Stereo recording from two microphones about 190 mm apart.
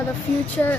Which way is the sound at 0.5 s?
10° left (ahead or behind).